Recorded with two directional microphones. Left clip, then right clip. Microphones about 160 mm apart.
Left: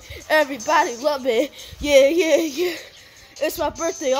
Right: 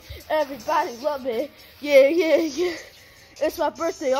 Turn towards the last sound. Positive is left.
turn(degrees=5)  # may be behind; listen again after turning